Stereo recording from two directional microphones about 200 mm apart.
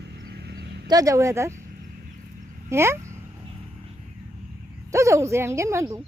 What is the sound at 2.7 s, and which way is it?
Speech, 15° right (ahead or behind).